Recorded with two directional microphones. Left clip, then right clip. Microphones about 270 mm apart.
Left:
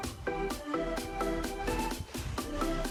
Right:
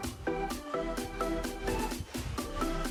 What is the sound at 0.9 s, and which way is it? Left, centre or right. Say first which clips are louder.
Music: left 1 dB; centre.